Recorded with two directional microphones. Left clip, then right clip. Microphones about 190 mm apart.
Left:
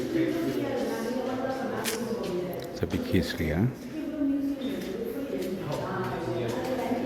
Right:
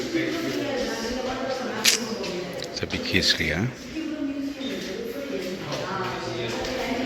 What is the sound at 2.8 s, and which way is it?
Speech, 20° left (ahead or behind).